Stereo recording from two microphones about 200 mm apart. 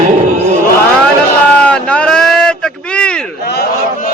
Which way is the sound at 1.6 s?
5° left (ahead or behind).